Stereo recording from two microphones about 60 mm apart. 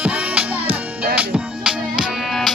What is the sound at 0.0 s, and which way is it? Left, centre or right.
Music, right.